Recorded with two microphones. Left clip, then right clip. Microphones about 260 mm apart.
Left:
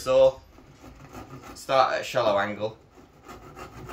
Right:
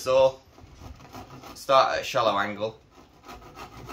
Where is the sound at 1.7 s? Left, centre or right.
Centre.